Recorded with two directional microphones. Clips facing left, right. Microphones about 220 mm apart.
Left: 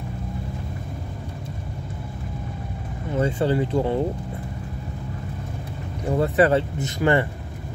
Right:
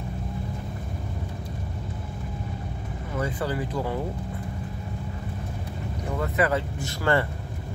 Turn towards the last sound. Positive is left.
turn(degrees=20)  # may be behind; listen again after turning